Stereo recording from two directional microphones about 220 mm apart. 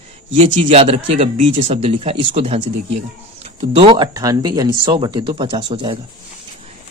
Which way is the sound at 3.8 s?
20° right (ahead or behind).